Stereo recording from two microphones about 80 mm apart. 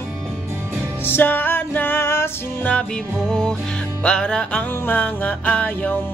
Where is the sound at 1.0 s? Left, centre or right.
Left.